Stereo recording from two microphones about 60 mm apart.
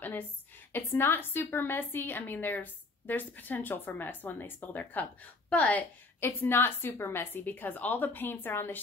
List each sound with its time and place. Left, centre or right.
0.7 s a woman's voice: left
6.2 s a woman's voice: left